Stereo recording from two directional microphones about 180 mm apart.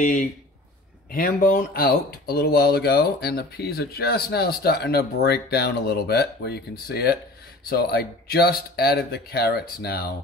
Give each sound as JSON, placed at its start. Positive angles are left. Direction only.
{"t": 0.0, "sound": "speech", "side_deg": 45}